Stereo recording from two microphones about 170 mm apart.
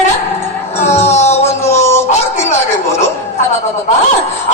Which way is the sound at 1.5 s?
15° left (ahead or behind).